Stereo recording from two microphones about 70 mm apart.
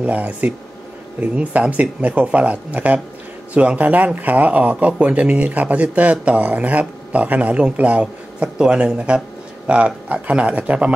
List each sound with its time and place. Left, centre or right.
0.0 s speech: right